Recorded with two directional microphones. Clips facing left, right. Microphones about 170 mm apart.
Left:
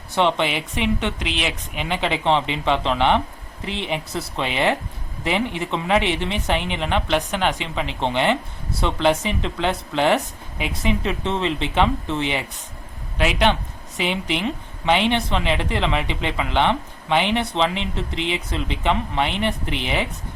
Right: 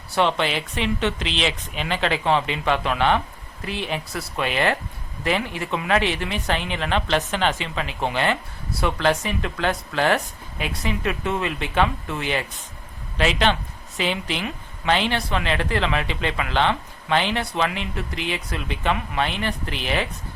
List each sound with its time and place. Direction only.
0.1 s speech: 20° left (ahead or behind)